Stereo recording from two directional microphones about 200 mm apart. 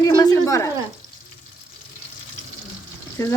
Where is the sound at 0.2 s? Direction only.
15° left (ahead or behind).